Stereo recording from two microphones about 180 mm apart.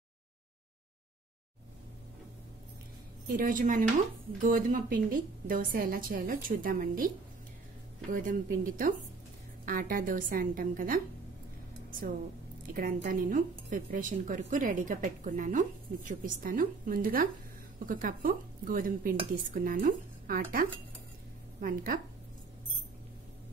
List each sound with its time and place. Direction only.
3.3 s a woman's voice: 45° right (ahead or behind)
8.1 s a woman's voice: 50° right (ahead or behind)
12.7 s a woman's voice: 50° right (ahead or behind)